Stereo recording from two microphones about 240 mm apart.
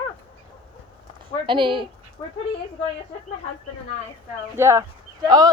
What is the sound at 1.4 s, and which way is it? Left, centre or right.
Speech, right.